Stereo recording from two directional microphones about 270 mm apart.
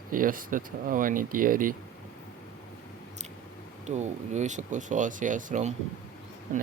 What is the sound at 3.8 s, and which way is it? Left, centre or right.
Speech, right.